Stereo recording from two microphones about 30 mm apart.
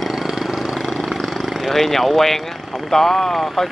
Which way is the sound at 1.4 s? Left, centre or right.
Centre.